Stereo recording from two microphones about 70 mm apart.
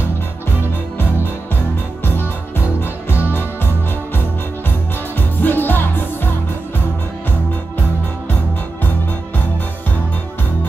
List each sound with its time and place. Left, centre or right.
2.8 s music: left
5.1 s music: left